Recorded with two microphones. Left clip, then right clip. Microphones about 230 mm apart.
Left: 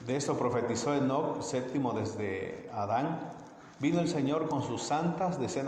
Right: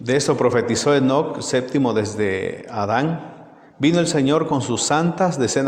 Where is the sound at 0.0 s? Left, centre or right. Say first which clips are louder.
Right 14 dB; right.